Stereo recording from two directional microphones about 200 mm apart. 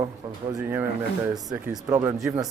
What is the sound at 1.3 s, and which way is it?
Speech, 15° right (ahead or behind).